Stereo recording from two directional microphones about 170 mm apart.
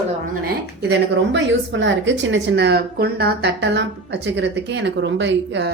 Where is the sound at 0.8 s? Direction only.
85° right.